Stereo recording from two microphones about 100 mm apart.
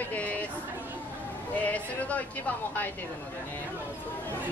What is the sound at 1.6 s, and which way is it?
Speech, 15° left (ahead or behind).